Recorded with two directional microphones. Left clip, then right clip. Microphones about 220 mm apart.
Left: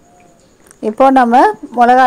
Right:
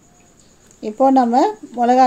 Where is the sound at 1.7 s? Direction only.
10° left (ahead or behind).